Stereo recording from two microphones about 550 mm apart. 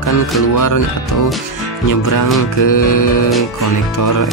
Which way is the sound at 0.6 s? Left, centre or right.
Left.